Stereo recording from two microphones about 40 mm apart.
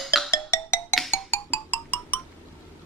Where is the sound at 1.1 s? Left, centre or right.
Left.